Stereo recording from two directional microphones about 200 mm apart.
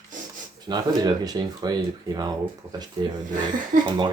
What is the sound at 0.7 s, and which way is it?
Speech, 20° right (ahead or behind).